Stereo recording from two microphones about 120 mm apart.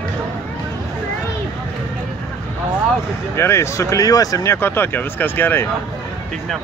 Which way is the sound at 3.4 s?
20° left (ahead or behind).